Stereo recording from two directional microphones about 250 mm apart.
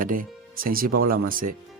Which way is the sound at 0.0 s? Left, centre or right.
Right.